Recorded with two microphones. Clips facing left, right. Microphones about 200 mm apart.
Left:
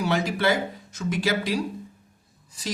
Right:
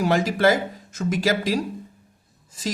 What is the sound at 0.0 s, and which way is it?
Speech, 45° right (ahead or behind).